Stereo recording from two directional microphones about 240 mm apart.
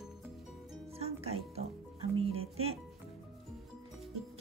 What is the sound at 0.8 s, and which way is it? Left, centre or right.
Music, right.